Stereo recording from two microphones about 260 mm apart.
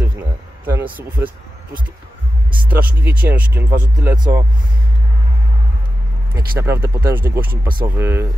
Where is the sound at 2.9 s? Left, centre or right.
Centre.